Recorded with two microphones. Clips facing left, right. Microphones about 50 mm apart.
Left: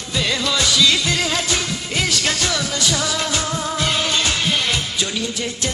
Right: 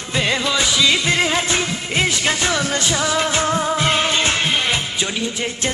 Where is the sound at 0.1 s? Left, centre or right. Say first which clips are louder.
Right 2 dB; right.